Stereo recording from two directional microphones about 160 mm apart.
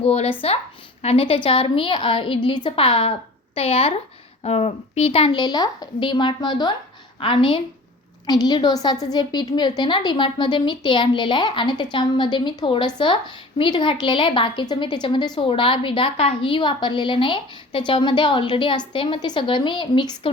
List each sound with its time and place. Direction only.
0.0 s a woman's voice: 40° left (ahead or behind)